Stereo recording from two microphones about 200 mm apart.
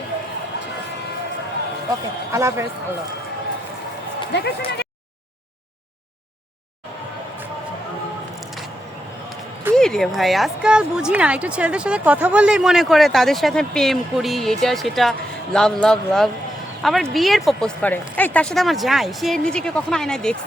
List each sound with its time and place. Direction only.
2.3 s speech: 15° right (ahead or behind)
4.3 s speech: 55° left (ahead or behind)
9.7 s a woman's voice: 5° left (ahead or behind)